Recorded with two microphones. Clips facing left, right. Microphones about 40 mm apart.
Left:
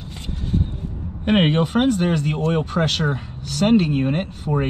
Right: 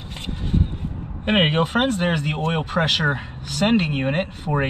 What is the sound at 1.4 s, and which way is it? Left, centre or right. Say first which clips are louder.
Speech: even; right.